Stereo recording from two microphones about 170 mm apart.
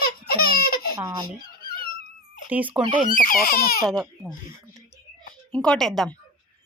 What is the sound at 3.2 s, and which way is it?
Speech, 60° left (ahead or behind).